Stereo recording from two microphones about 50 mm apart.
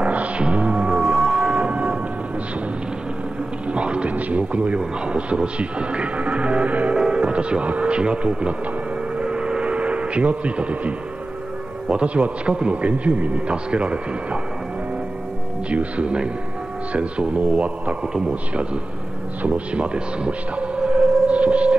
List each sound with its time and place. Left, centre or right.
0.0 s music: right
3.7 s a man's voice: right
9.2 s a sound: centre
11.9 s a man's voice: right
15.7 s a man's voice: right
19.4 s music: right